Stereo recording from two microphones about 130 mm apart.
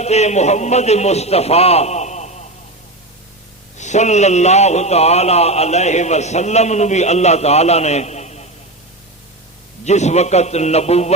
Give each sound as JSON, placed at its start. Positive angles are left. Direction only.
{"t": 0.0, "sound": "a man's voice", "side_deg": 60}
{"t": 3.8, "sound": "a man's voice", "side_deg": 65}
{"t": 9.8, "sound": "a man's voice", "side_deg": 60}